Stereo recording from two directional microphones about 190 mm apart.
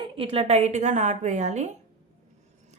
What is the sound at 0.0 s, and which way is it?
A woman's voice, 30° right (ahead or behind).